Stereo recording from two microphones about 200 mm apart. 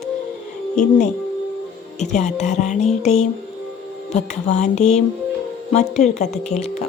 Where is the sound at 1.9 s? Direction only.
35° left (ahead or behind).